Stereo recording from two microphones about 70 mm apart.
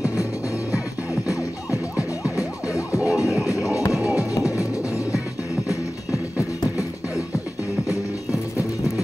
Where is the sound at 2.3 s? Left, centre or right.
Left.